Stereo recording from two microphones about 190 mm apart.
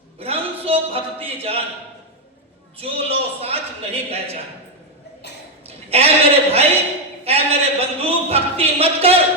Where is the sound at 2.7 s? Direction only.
30° right (ahead or behind).